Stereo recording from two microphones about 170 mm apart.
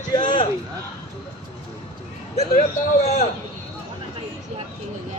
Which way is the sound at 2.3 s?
40° left (ahead or behind).